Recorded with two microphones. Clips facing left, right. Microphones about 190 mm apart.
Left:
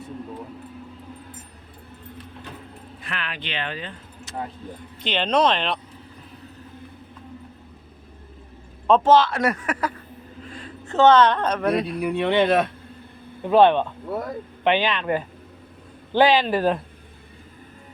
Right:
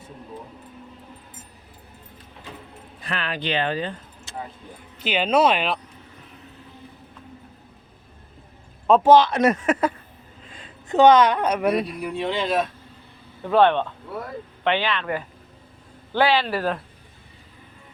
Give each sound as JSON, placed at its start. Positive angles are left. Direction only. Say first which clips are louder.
{"t": 3.0, "sound": "speech", "louder": "right 5 dB", "side_deg": -35}
{"t": 4.9, "sound": "speech", "louder": "right 1 dB", "side_deg": -5}
{"t": 8.9, "sound": "speech", "louder": "right 2 dB", "side_deg": -15}
{"t": 12.0, "sound": "speech", "louder": "left 5 dB", "side_deg": 60}
{"t": 13.4, "sound": "speech", "louder": "left 2 dB", "side_deg": 15}